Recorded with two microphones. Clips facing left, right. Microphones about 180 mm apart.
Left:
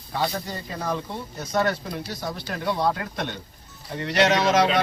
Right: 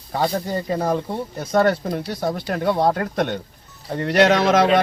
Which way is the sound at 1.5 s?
50° right (ahead or behind).